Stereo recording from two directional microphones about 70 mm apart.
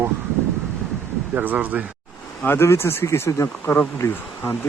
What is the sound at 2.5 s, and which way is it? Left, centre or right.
Speech, left.